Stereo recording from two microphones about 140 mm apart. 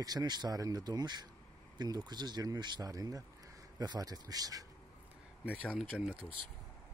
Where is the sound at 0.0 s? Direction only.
30° right (ahead or behind).